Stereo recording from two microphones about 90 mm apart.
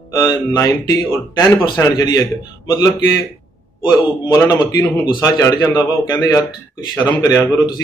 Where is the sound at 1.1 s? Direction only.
35° left (ahead or behind).